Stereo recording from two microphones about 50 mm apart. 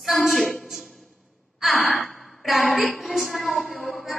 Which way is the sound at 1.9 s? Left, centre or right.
Centre.